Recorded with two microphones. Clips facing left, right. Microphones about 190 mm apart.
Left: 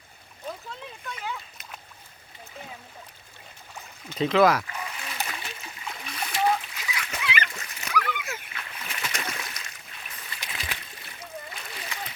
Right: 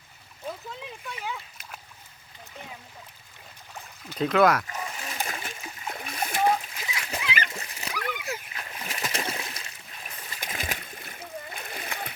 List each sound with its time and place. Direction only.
1.0 s splash: 5° right (ahead or behind)
4.1 s speech: centre (ahead or behind)
4.7 s splash: 40° right (ahead or behind)
6.7 s splash: 30° right (ahead or behind)
10.2 s splash: 40° right (ahead or behind)